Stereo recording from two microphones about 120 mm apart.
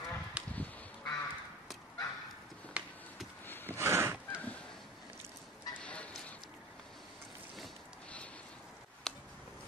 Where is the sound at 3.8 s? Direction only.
20° right (ahead or behind).